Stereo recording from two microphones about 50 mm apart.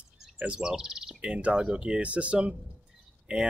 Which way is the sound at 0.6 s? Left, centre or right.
Centre.